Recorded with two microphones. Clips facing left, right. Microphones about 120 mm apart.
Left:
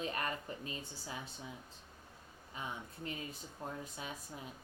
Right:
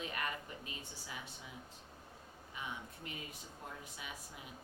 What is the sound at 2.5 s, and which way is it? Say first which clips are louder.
Speech: left 2 dB; 35° left (ahead or behind).